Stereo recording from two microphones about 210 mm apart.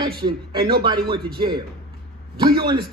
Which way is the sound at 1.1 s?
20° right (ahead or behind).